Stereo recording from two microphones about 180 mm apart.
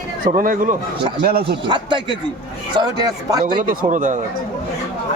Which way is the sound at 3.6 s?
45° right (ahead or behind).